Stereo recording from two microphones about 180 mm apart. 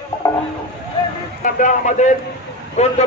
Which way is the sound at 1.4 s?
45° left (ahead or behind).